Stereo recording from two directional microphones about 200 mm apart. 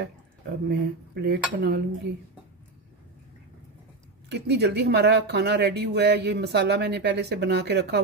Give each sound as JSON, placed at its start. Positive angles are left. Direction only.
{"t": 0.7, "sound": "speech", "side_deg": -55}
{"t": 4.3, "sound": "speech", "side_deg": -55}